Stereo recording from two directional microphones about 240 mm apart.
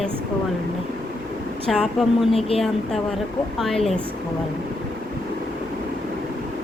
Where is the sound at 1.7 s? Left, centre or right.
Centre.